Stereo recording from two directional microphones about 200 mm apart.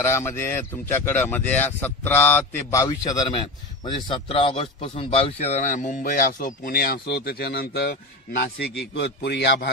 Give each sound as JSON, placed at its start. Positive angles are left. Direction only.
{"t": 0.0, "sound": "speech", "side_deg": 10}